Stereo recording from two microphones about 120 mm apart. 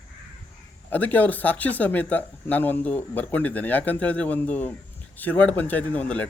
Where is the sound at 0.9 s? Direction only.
15° left (ahead or behind).